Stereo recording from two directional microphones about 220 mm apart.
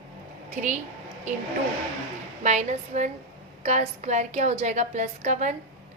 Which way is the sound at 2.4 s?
30° right (ahead or behind).